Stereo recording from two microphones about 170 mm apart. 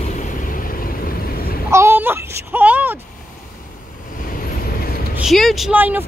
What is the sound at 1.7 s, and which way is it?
Baby cry, 15° right (ahead or behind).